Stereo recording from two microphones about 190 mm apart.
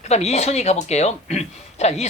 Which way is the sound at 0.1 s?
35° left (ahead or behind).